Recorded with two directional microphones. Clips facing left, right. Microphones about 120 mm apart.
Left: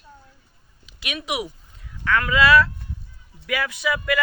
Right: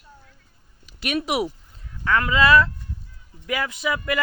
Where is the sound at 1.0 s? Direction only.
40° right (ahead or behind).